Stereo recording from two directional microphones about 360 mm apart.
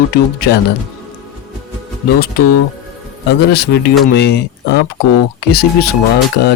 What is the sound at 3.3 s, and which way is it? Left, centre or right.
Speech, left.